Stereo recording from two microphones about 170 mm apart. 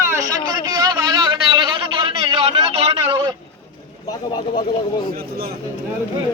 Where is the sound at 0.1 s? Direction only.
20° right (ahead or behind).